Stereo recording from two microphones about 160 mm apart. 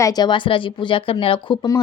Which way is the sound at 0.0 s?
25° left (ahead or behind).